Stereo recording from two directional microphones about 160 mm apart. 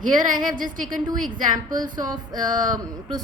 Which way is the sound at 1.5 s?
25° right (ahead or behind).